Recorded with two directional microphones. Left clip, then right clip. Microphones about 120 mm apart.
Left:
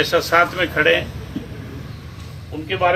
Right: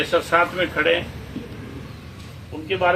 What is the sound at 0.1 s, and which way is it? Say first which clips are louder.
Speech: left 3 dB; 15° right (ahead or behind).